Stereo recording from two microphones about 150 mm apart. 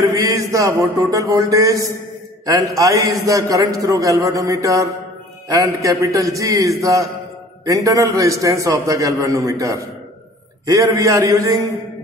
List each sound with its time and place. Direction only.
0.2 s a man's voice: 20° right (ahead or behind)